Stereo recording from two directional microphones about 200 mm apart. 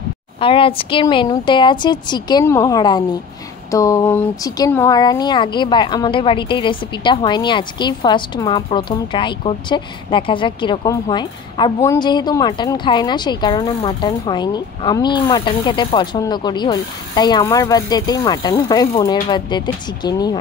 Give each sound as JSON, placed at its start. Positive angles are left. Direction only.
{"t": 0.4, "sound": "speech", "side_deg": 25}